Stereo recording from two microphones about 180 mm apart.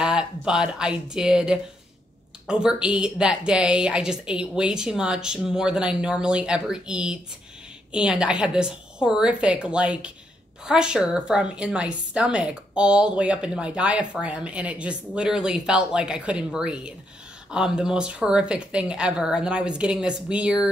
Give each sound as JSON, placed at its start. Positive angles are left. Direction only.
{"t": 0.0, "sound": "a woman's voice", "side_deg": -5}